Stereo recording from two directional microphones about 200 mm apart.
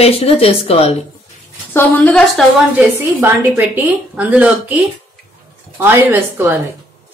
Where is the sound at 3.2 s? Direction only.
10° right (ahead or behind).